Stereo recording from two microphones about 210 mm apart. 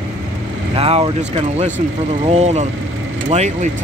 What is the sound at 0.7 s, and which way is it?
Speech, 25° right (ahead or behind).